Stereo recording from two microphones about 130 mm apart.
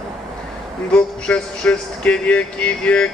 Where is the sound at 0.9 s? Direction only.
5° left (ahead or behind).